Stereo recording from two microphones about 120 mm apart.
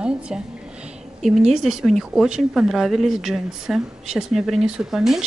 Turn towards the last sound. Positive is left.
turn(degrees=-5)  # may be behind; listen again after turning